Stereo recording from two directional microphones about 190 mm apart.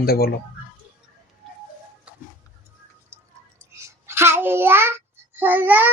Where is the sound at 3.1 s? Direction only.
15° right (ahead or behind).